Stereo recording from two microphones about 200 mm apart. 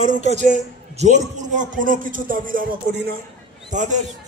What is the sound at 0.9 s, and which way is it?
A man's voice, 35° right (ahead or behind).